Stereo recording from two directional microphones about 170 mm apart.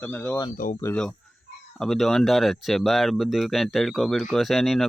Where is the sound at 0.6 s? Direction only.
55° left (ahead or behind).